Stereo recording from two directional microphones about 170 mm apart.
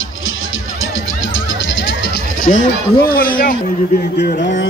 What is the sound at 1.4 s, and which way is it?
Speech, 90° left.